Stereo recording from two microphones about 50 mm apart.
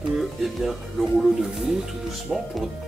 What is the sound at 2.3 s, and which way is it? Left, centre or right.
Speech, left.